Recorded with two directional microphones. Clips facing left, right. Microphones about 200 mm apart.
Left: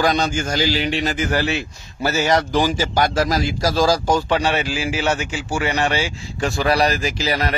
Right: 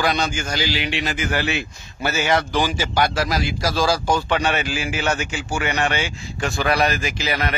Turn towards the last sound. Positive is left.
turn(degrees=35)  # may be behind; listen again after turning